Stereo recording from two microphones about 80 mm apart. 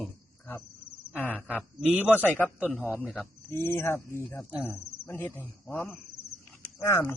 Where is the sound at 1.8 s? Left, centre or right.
Centre.